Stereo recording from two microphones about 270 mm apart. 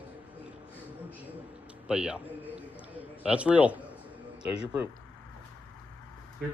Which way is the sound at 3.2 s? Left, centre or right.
Centre.